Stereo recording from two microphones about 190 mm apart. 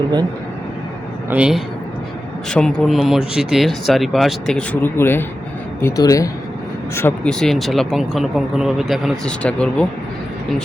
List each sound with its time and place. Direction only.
1.3 s speech: 5° right (ahead or behind)